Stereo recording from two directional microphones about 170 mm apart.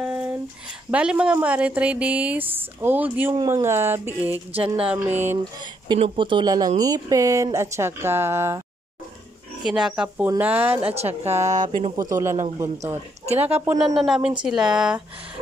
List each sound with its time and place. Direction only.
0.0 s a sound: 5° right (ahead or behind)
0.9 s a woman's voice: 5° right (ahead or behind)
5.9 s a woman's voice: 30° right (ahead or behind); by 8.6 s 15° right (ahead or behind)
9.6 s a woman's voice: 5° right (ahead or behind)
11.4 s speech: 45° right (ahead or behind)
12.0 s a woman's voice: 20° right (ahead or behind)
13.8 s speech: centre (ahead or behind)